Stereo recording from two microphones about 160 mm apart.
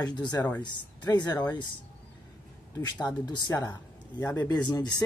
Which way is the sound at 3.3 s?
25° left (ahead or behind).